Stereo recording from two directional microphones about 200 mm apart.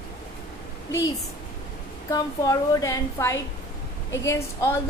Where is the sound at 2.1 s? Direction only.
20° left (ahead or behind).